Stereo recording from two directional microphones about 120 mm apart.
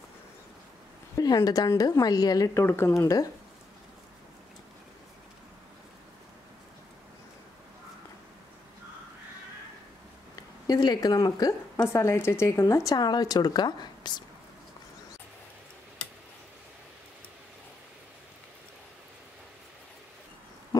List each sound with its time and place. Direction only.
1.1 s speech: 30° left (ahead or behind)
2.6 s speech: 20° left (ahead or behind)
10.7 s speech: 35° left (ahead or behind)
11.7 s speech: 20° left (ahead or behind); by 14.2 s 35° left (ahead or behind)